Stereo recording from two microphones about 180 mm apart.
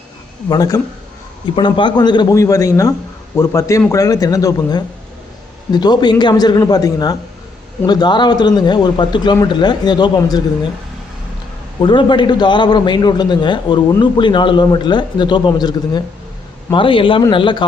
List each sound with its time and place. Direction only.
0.4 s a man's voice: 20° left (ahead or behind)
11.8 s a man's voice: 25° left (ahead or behind)